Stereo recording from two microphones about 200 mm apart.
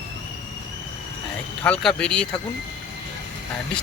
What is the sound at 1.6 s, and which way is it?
Speech, 5° left (ahead or behind).